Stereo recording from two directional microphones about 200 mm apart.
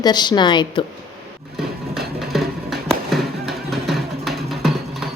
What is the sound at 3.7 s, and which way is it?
Music, centre (ahead or behind).